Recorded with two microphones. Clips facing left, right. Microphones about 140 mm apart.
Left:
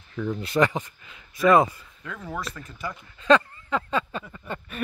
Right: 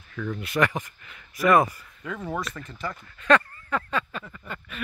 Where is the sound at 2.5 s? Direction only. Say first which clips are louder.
Right 1 dB; 10° left (ahead or behind).